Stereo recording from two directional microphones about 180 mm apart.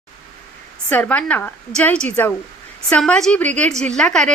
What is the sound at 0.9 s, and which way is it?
A woman's voice, 5° left (ahead or behind).